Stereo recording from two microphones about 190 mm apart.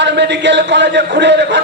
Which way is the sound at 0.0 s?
65° right (ahead or behind).